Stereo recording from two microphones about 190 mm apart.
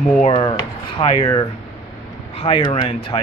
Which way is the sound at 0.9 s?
30° left (ahead or behind).